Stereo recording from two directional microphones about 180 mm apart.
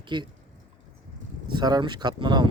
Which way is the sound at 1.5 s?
25° right (ahead or behind).